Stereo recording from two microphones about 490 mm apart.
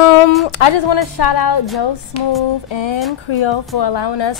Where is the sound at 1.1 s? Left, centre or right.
Left.